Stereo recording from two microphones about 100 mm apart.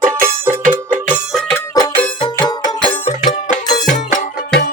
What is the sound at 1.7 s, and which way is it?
Music, 35° left (ahead or behind).